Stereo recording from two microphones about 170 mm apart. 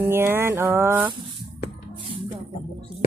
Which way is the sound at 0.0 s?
15° right (ahead or behind).